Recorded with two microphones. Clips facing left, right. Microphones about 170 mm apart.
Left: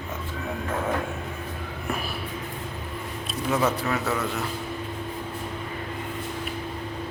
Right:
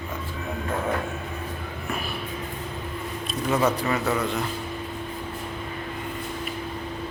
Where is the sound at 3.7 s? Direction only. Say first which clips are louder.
Right 2 dB; centre (ahead or behind).